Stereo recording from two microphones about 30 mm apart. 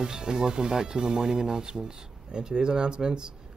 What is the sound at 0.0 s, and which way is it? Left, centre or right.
Speech, right.